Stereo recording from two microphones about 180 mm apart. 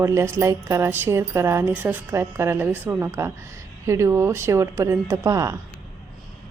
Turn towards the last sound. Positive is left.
turn(degrees=-15)  # may be behind; listen again after turning